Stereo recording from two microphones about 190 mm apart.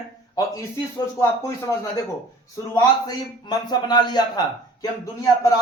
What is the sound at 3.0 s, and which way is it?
A man's voice, 20° left (ahead or behind).